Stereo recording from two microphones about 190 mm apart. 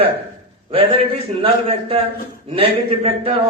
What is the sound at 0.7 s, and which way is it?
A man's voice, 30° right (ahead or behind).